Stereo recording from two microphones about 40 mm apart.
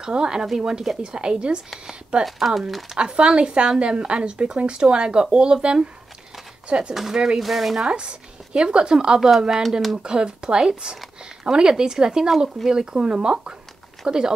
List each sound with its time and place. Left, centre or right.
0.0 s speech: centre
2.2 s speech: centre
3.0 s speech: right
6.9 s speech: centre
7.8 s speech: right
9.6 s speech: centre
9.9 s speech: right